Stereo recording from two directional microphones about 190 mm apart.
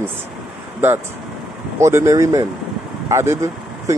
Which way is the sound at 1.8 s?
15° right (ahead or behind).